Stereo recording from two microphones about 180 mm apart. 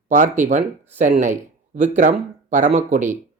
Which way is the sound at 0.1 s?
45° right (ahead or behind).